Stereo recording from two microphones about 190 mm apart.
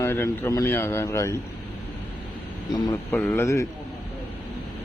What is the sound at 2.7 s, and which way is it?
Speech, 15° left (ahead or behind).